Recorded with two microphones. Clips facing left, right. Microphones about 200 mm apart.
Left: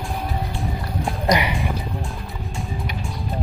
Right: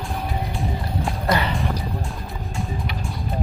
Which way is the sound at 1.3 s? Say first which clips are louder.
Left 2 dB; 15° left (ahead or behind).